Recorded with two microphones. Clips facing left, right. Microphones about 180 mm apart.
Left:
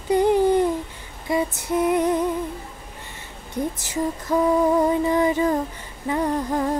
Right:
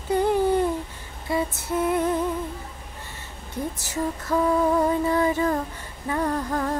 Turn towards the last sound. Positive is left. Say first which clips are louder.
# left 3 dB
turn(degrees=20)  # may be behind; listen again after turning